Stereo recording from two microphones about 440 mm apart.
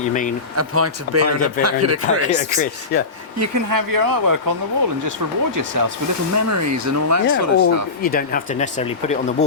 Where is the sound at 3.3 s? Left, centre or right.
Right.